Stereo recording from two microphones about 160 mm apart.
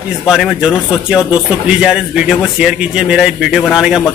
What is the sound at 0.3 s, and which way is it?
A man's voice, centre (ahead or behind).